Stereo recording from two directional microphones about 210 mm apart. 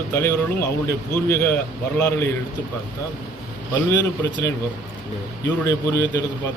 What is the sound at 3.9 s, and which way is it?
Speech, 15° left (ahead or behind).